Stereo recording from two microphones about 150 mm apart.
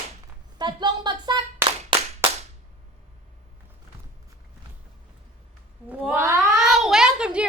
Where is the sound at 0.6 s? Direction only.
30° right (ahead or behind).